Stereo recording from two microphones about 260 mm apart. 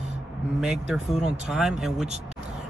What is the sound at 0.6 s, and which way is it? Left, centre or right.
Speech, centre.